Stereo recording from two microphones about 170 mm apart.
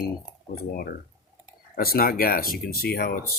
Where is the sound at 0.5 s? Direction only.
55° left (ahead or behind).